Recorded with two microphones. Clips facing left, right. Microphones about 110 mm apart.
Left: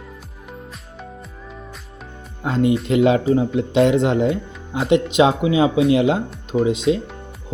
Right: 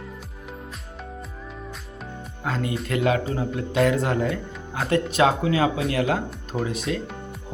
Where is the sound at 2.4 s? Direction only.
25° left (ahead or behind).